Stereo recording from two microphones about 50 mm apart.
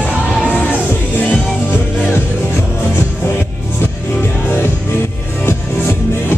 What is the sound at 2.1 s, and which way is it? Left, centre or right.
Music, left.